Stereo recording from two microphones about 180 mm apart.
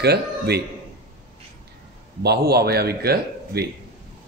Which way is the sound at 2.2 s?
65° right (ahead or behind).